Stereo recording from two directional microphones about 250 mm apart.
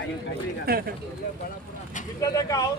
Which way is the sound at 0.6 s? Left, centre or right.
Right.